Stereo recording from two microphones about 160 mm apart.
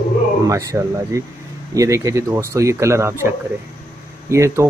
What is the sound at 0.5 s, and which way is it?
Speech, 20° right (ahead or behind).